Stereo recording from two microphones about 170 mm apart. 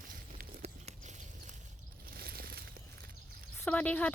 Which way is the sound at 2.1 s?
65° right (ahead or behind).